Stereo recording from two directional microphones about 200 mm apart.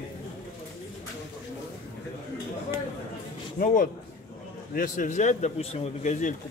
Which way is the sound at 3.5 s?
45° left (ahead or behind).